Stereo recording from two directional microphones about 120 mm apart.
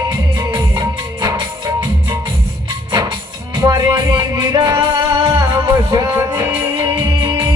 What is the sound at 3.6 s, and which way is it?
Music, 30° right (ahead or behind).